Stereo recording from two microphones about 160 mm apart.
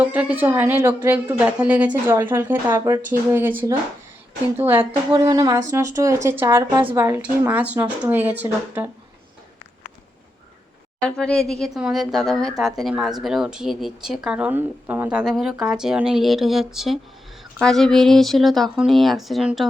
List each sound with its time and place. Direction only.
0.0 s a woman's voice: 10° right (ahead or behind)
4.8 s speech: 35° right (ahead or behind)
5.2 s a woman's voice: 20° right (ahead or behind)
11.0 s speech: 5° left (ahead or behind)